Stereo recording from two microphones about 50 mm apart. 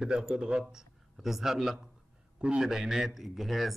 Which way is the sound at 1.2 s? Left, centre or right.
Centre.